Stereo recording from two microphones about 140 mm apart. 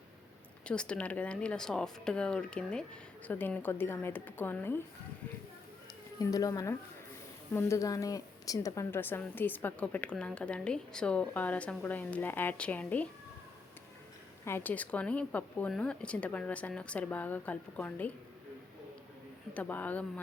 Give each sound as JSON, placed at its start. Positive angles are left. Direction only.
{"t": 0.6, "sound": "a woman's voice", "side_deg": 5}
{"t": 6.1, "sound": "a woman's voice", "side_deg": 25}
{"t": 14.4, "sound": "a woman's voice", "side_deg": 15}
{"t": 19.5, "sound": "a woman's voice", "side_deg": 10}